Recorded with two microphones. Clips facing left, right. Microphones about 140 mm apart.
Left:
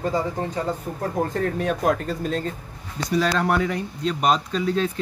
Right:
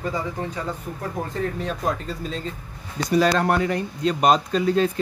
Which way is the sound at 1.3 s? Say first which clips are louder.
Left 3 dB; 60° left (ahead or behind).